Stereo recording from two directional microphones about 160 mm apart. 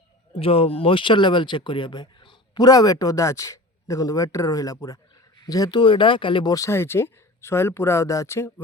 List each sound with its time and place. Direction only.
0.3 s speech: 35° left (ahead or behind); by 8.6 s 15° left (ahead or behind)